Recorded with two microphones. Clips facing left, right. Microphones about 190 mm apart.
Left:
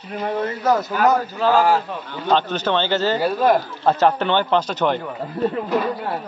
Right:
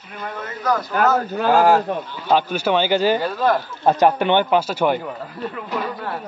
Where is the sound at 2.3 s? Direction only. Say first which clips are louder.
Right 1 dB; 10° right (ahead or behind).